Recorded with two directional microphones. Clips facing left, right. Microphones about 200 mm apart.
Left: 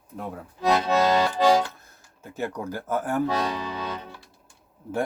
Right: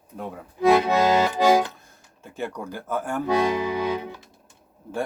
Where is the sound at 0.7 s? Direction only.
15° right (ahead or behind).